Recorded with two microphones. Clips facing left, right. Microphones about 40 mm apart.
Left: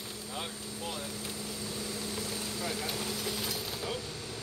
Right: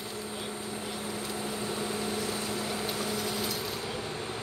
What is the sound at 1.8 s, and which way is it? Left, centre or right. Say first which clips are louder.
Vehicle: right 5 dB; right.